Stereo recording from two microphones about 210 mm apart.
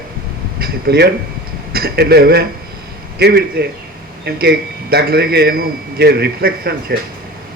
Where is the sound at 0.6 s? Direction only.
50° right (ahead or behind).